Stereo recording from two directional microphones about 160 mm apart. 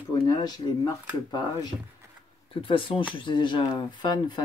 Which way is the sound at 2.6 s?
35° left (ahead or behind).